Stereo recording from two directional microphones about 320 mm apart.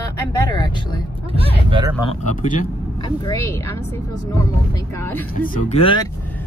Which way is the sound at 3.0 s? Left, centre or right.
Centre.